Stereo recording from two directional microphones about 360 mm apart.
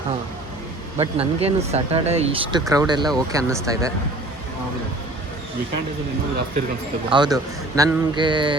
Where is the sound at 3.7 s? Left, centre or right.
Centre.